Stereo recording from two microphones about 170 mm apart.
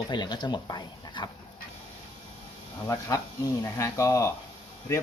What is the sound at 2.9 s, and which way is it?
Speech, 20° left (ahead or behind).